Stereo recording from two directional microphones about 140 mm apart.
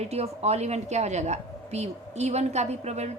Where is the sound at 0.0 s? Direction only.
50° right (ahead or behind).